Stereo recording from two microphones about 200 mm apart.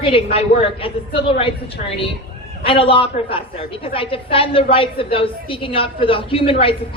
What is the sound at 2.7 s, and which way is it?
A woman's voice, 25° left (ahead or behind).